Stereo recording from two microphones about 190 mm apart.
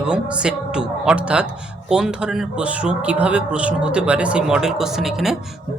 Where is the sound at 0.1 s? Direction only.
5° right (ahead or behind).